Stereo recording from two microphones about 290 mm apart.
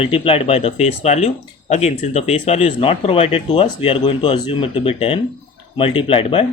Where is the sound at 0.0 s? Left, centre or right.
Centre.